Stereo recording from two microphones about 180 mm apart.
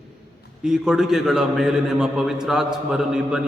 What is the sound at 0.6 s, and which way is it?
A man's voice, 5° right (ahead or behind).